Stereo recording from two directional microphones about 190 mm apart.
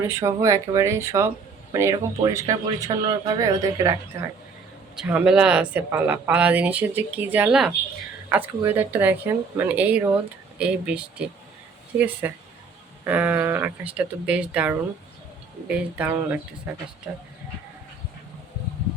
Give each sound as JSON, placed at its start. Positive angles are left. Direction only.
{"t": 0.0, "sound": "speech", "side_deg": -15}
{"t": 4.9, "sound": "speech", "side_deg": -5}